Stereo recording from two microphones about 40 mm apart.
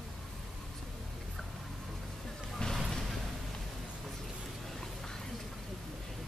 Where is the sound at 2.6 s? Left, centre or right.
Left.